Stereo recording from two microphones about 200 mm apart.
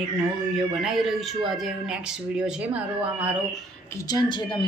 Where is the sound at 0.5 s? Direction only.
Centre (ahead or behind).